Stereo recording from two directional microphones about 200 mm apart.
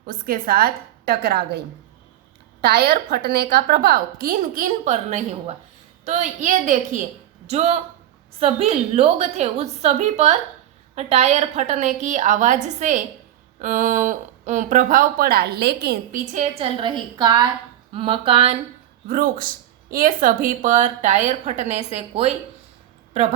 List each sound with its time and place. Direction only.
0.0 s a woman's voice: 45° right (ahead or behind)
16.3 s speech: 35° right (ahead or behind)
16.8 s a woman's voice: 20° right (ahead or behind)
19.0 s speech: 45° right (ahead or behind)